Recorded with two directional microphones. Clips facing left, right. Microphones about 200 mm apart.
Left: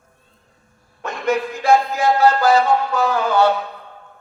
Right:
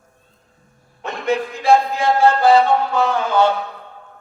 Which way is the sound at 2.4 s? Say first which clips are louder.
Right 2 dB; 30° right (ahead or behind).